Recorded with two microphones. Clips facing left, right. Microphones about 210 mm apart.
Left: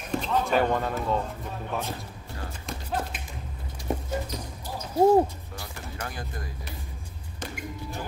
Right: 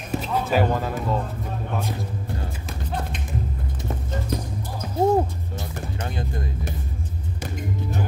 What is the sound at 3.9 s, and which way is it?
Clip-clop, 15° left (ahead or behind).